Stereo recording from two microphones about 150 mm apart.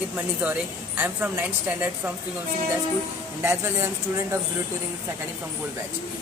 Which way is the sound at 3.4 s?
15° right (ahead or behind).